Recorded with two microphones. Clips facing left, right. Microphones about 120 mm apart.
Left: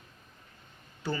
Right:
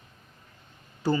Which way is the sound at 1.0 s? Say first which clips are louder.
Right 8 dB; 40° right (ahead or behind).